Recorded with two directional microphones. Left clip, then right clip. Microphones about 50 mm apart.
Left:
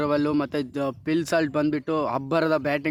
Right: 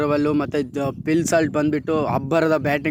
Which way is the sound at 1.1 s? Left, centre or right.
Right.